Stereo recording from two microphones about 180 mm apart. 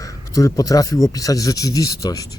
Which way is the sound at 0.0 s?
20° left (ahead or behind).